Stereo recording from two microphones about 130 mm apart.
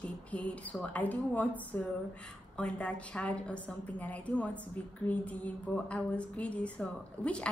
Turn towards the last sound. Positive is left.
turn(degrees=10)  # may be behind; listen again after turning